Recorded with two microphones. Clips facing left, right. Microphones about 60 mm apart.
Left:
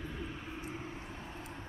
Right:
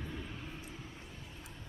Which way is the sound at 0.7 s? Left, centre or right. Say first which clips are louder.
Left 6 dB; left.